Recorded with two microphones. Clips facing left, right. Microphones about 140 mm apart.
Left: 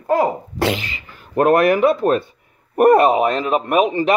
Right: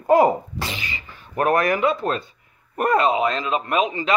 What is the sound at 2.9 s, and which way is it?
Speech, 55° left (ahead or behind).